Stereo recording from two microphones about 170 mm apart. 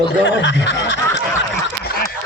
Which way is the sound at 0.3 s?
90° left.